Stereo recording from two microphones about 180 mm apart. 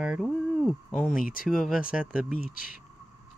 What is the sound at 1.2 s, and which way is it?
Speech, 50° left (ahead or behind).